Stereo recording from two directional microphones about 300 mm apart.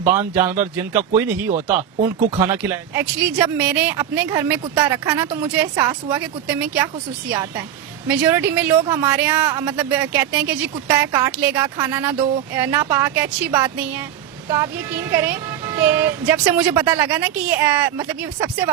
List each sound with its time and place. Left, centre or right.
0.1 s speech: centre